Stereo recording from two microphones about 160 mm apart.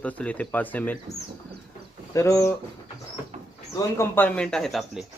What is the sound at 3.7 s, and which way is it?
Speech, 15° left (ahead or behind).